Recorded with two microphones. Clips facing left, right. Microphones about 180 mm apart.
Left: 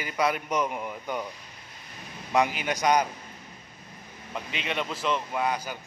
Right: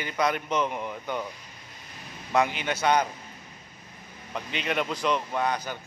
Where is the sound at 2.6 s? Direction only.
10° left (ahead or behind).